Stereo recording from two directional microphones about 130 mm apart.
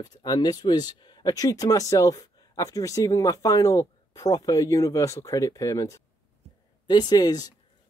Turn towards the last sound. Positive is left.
turn(degrees=30)  # may be behind; listen again after turning